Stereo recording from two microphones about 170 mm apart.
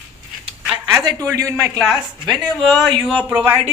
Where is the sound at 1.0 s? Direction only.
20° right (ahead or behind).